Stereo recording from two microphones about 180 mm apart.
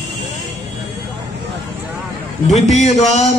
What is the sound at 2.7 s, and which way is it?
Speech, 40° left (ahead or behind).